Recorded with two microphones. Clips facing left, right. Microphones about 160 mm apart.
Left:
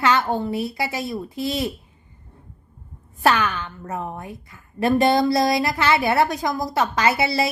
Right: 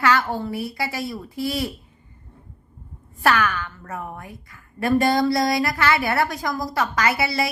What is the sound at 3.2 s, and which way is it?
A woman's voice, 20° left (ahead or behind).